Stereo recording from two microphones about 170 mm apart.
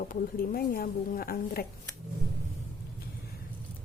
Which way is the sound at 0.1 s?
60° left (ahead or behind).